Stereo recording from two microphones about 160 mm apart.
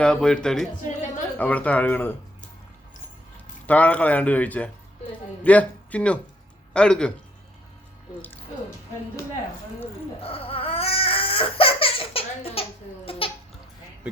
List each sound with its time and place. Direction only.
0.0 s speech: 5° left (ahead or behind)
3.7 s speech: 10° left (ahead or behind)
10.2 s crying: 35° left (ahead or behind)
13.1 s a sound: 35° left (ahead or behind)